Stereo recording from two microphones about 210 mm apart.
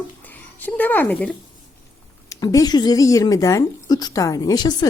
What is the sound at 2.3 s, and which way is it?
Speech, 15° left (ahead or behind).